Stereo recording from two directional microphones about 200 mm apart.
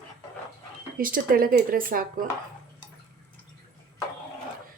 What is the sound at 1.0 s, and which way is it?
Speech, 45° right (ahead or behind).